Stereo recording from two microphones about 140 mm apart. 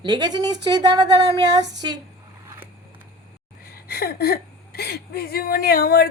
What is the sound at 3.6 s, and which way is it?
A woman's voice, 90° left.